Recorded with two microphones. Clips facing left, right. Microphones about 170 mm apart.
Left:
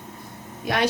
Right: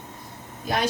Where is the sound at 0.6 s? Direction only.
70° left (ahead or behind).